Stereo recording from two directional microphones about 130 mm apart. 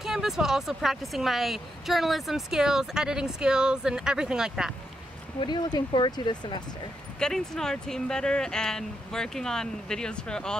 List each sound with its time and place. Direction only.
0.0 s speech: 5° right (ahead or behind)
5.4 s speech: 35° left (ahead or behind)
7.2 s speech: 5° left (ahead or behind)